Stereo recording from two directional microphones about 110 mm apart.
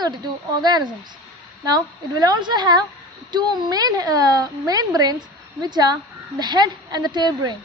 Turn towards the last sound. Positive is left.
turn(degrees=-40)  # may be behind; listen again after turning